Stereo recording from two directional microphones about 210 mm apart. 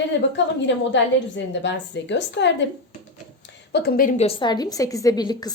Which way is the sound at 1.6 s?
55° left (ahead or behind).